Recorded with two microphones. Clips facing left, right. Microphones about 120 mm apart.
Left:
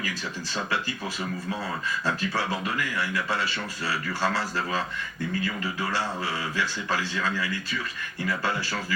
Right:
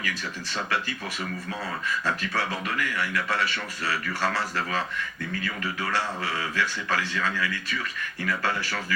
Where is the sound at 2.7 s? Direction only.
25° left (ahead or behind).